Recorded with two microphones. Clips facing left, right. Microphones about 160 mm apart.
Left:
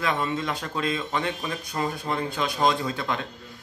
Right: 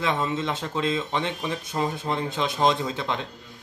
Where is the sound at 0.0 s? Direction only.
20° right (ahead or behind).